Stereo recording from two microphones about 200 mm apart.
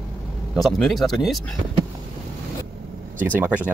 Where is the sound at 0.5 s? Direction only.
Centre (ahead or behind).